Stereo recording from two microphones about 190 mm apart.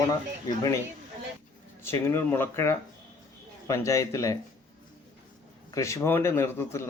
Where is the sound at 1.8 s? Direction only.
15° left (ahead or behind).